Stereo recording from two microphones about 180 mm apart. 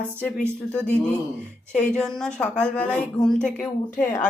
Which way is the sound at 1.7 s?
5° left (ahead or behind).